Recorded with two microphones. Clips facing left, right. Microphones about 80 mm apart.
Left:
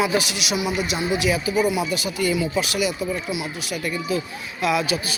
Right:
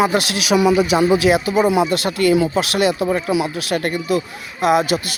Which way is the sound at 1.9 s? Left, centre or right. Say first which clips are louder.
Right 7 dB; right.